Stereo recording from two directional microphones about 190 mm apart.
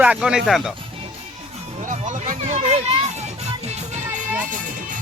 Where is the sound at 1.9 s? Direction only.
40° right (ahead or behind).